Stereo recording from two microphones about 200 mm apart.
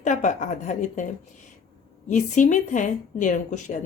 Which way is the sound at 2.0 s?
40° left (ahead or behind).